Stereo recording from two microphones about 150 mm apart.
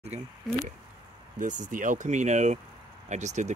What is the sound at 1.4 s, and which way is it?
Speech, 55° right (ahead or behind).